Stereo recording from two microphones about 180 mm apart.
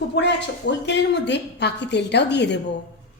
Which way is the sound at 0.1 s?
75° left (ahead or behind).